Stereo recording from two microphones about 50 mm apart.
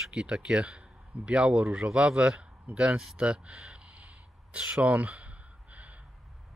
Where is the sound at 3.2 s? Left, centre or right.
Right.